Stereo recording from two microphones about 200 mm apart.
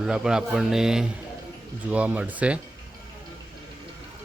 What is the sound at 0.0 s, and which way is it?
Speech, 5° right (ahead or behind).